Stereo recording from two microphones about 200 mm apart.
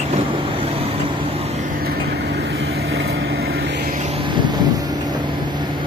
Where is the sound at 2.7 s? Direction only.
80° right.